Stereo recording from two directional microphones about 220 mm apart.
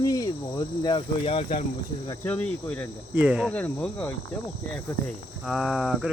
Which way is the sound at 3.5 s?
5° left (ahead or behind).